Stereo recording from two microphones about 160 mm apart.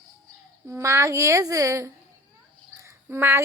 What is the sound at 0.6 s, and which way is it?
A woman's voice, 20° right (ahead or behind).